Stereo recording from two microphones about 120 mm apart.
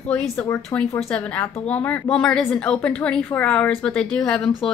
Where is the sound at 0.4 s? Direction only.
20° left (ahead or behind).